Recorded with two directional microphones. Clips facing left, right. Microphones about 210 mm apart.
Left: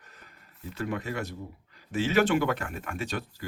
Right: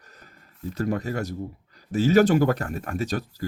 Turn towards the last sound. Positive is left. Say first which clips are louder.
# right 6 dB
turn(degrees=-40)  # may be behind; listen again after turning